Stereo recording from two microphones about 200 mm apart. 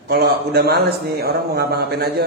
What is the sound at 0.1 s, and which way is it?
Speech, 50° right (ahead or behind).